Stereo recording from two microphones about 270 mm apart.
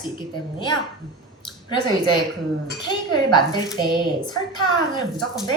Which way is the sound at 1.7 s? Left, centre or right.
Centre.